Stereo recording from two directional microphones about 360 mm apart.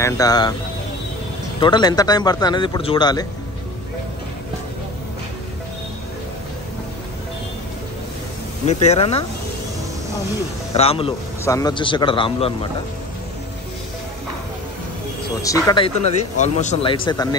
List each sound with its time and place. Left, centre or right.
0.0 s speech: centre
1.6 s speech: centre
8.6 s speech: centre
10.7 s speech: centre
15.4 s speech: centre